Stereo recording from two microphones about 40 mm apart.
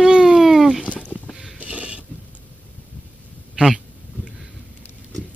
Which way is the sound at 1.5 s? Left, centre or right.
Right.